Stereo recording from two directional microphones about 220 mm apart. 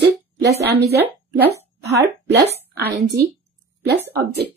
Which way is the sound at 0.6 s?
50° right (ahead or behind).